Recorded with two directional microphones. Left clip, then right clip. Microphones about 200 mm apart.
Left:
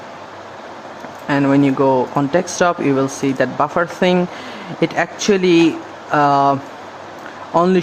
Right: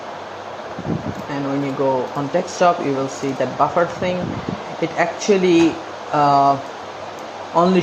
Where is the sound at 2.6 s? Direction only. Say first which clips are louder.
Right 1 dB; 30° left (ahead or behind).